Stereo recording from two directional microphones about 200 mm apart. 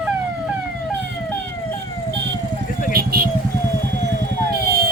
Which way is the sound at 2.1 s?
60° right (ahead or behind).